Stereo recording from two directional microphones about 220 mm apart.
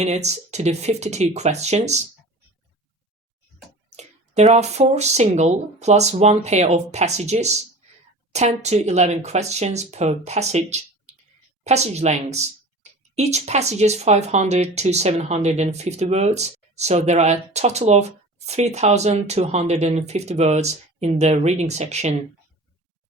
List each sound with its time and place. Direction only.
0.0 s speech: 30° right (ahead or behind)
3.9 s speech: 30° right (ahead or behind)